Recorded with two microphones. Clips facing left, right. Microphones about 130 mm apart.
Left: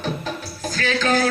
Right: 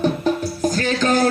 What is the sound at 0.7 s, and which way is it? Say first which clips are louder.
Music: even; 45° right (ahead or behind).